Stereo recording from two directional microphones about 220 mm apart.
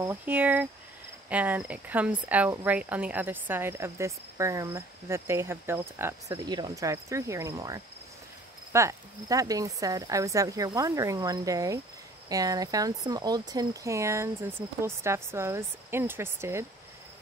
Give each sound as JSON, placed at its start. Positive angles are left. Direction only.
{"t": 0.0, "sound": "speech", "side_deg": -10}